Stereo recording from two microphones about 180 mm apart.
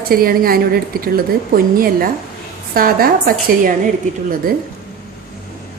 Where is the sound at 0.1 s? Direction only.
55° right (ahead or behind).